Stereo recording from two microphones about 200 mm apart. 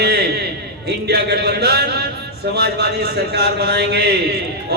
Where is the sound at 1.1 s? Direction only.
55° right (ahead or behind).